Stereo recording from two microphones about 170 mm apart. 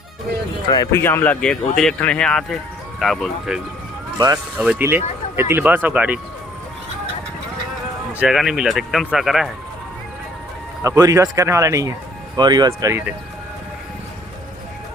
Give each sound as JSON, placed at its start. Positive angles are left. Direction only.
{"t": 0.7, "sound": "speech", "side_deg": 20}
{"t": 8.2, "sound": "speech", "side_deg": -5}
{"t": 10.8, "sound": "speech", "side_deg": -20}